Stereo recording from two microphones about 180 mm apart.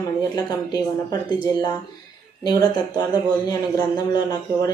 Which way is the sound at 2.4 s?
20° left (ahead or behind).